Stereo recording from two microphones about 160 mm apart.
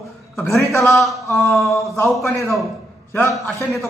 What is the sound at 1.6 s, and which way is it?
Speech, 15° left (ahead or behind).